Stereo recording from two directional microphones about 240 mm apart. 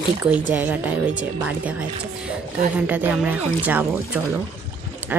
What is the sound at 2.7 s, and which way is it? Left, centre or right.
Speech, centre.